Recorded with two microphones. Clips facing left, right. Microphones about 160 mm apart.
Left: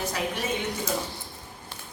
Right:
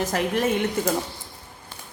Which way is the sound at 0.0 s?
50° right (ahead or behind).